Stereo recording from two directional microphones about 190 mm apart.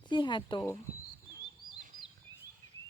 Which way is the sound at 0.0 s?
25° left (ahead or behind).